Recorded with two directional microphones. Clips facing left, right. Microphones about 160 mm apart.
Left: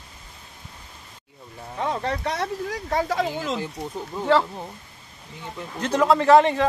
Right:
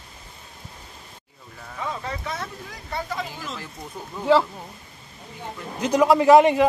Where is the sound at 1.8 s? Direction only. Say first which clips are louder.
Left 5 dB; 70° left (ahead or behind); by 3.6 s 90° left.